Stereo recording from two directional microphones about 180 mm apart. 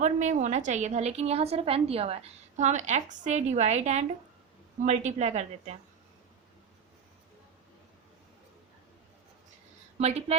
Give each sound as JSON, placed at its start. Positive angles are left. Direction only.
{"t": 0.0, "sound": "a woman's voice", "side_deg": -40}
{"t": 10.0, "sound": "a woman's voice", "side_deg": -35}